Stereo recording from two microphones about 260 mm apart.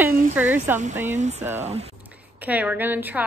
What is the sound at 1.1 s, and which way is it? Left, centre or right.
Speech, right.